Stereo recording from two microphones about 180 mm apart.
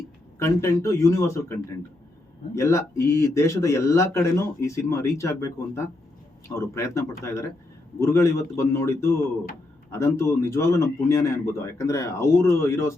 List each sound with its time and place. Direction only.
0.3 s speech: 15° left (ahead or behind)